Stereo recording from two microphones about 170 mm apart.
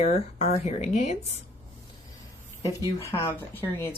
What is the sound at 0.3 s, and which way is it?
Speech, 35° left (ahead or behind).